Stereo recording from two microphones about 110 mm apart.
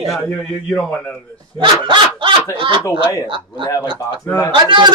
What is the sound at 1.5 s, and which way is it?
Speech, 45° right (ahead or behind).